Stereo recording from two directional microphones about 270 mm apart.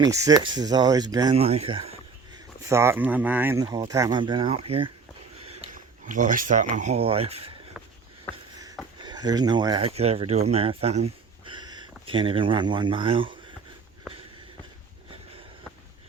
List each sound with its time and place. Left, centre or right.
0.0 s speech: centre
2.6 s speech: centre
8.3 s shuffle: centre
9.0 s speech: centre